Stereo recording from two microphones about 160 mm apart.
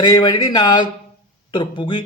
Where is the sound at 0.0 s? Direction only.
25° left (ahead or behind).